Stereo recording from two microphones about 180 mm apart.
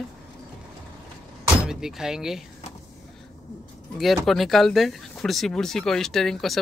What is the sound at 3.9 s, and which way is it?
Speech, centre (ahead or behind).